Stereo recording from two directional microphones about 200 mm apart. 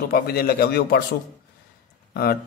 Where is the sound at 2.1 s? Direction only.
50° left (ahead or behind).